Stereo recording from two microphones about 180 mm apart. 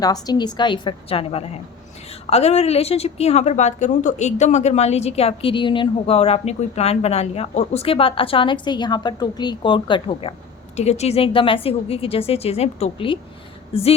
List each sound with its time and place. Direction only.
0.0 s a woman's voice: 20° left (ahead or behind)